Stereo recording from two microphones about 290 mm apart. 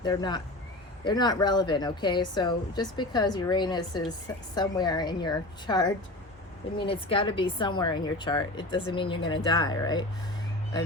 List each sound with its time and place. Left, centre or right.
0.0 s speech: centre